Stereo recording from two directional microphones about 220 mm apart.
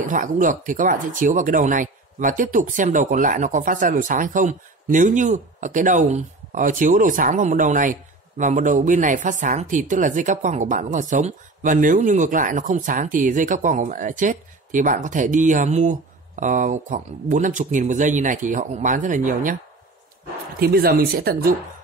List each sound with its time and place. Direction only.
0.1 s speech: 35° right (ahead or behind)
20.5 s speech: 45° right (ahead or behind)